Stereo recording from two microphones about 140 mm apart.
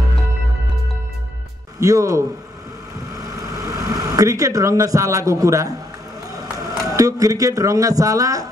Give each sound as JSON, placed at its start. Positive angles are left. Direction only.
{"t": 1.8, "sound": "speech", "side_deg": -25}
{"t": 3.2, "sound": "a sound", "side_deg": -25}
{"t": 6.8, "sound": "speech", "side_deg": -25}